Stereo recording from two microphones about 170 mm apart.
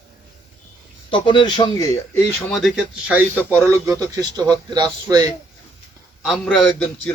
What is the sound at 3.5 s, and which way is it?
A man's voice, 15° right (ahead or behind).